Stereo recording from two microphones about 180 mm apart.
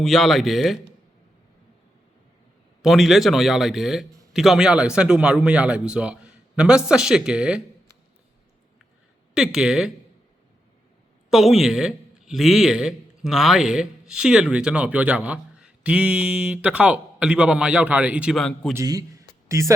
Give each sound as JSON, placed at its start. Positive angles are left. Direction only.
{"t": 0.0, "sound": "a man's voice", "side_deg": 0}
{"t": 2.8, "sound": "a man's voice", "side_deg": 0}
{"t": 9.3, "sound": "a man's voice", "side_deg": -5}
{"t": 11.3, "sound": "a man's voice", "side_deg": 0}
{"t": 18.7, "sound": "a man's voice", "side_deg": -15}